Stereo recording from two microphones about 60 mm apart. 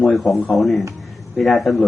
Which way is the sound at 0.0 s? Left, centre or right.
Centre.